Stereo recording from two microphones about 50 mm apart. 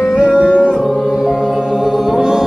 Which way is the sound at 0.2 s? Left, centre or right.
Right.